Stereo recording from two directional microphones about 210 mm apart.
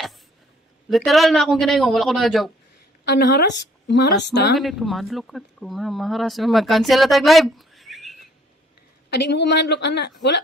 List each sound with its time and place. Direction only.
0.8 s speech: centre (ahead or behind)
3.1 s speech: 55° left (ahead or behind)
4.6 s speech: centre (ahead or behind)
9.1 s speech: 55° left (ahead or behind)